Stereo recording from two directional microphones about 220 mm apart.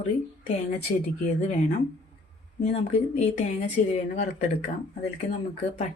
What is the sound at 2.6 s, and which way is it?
Speech, 30° left (ahead or behind).